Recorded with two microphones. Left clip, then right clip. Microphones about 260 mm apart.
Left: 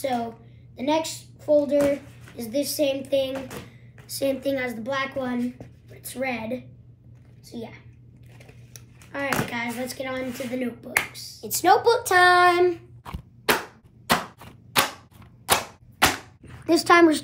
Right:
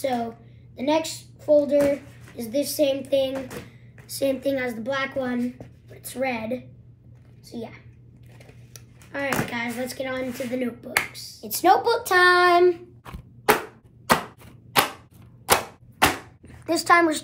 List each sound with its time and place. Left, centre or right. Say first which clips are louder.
0.0 s a woman's voice: right 1 dB; centre
11.5 s speech: even; centre
14.0 s a sound: right 2 dB; centre
16.6 s a woman's voice: left 2 dB; right